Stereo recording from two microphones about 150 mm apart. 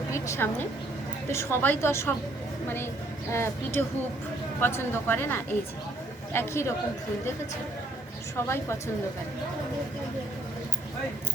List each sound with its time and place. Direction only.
0.1 s a sound: 15° left (ahead or behind)
1.3 s speech: 15° left (ahead or behind)
8.4 s speech: 15° left (ahead or behind)